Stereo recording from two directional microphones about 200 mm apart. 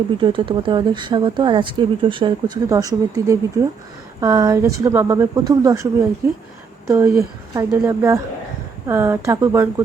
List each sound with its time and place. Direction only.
0.2 s speech: 25° right (ahead or behind)